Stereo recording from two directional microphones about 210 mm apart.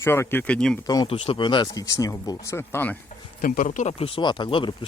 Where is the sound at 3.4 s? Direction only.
40° left (ahead or behind); by 4.7 s 25° left (ahead or behind).